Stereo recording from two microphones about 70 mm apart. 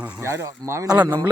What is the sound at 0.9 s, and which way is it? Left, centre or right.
Speech, right.